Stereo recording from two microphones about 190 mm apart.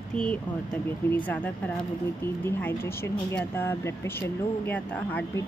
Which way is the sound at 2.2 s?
10° left (ahead or behind).